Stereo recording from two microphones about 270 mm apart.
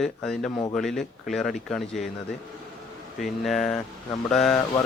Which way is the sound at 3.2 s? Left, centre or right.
Centre.